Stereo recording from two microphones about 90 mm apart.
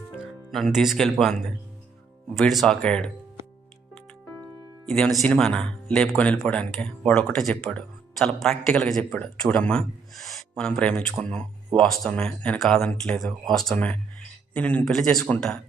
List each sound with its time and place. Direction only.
0.5 s speech: centre (ahead or behind)
4.9 s speech: 5° left (ahead or behind)
12.5 s speech: 5° left (ahead or behind)
12.9 s speech: 15° left (ahead or behind)
13.7 s speech: 15° left (ahead or behind)